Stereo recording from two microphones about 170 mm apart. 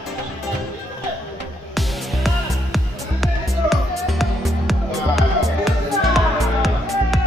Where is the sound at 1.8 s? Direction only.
Centre (ahead or behind).